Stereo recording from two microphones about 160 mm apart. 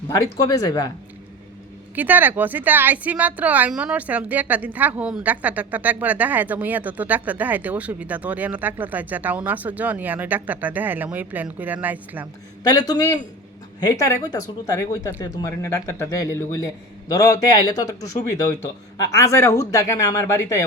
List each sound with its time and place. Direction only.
0.1 s speech: 25° left (ahead or behind)
2.0 s a woman's voice: 10° right (ahead or behind)
12.9 s speech: 25° left (ahead or behind)
19.1 s speech: 20° left (ahead or behind)